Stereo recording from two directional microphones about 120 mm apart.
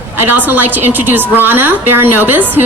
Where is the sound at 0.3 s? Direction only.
15° right (ahead or behind).